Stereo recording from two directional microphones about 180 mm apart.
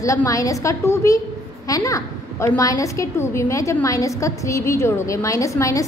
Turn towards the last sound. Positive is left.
turn(degrees=15)  # may be behind; listen again after turning